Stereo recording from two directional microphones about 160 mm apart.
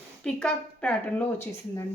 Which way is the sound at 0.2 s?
5° left (ahead or behind).